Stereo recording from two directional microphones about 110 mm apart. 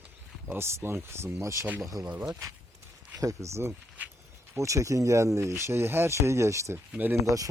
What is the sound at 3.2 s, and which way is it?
Speech, 30° right (ahead or behind).